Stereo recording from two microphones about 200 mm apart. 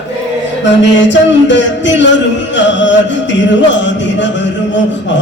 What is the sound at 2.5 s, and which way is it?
Music, 65° left (ahead or behind).